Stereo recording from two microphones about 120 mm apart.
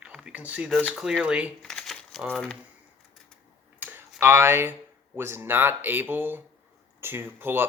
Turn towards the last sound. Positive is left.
turn(degrees=-20)  # may be behind; listen again after turning